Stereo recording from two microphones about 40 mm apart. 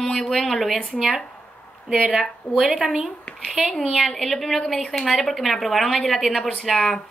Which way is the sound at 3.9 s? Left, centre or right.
Centre.